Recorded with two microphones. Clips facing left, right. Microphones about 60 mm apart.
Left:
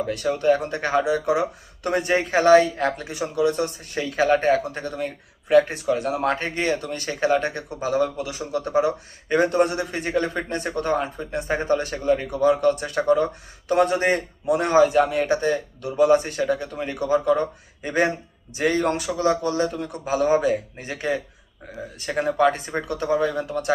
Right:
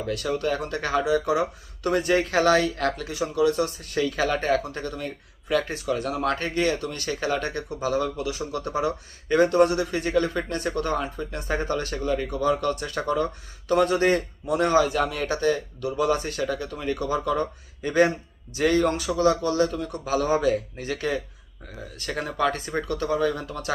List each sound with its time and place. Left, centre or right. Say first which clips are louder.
0.1 s speech: left 5 dB; left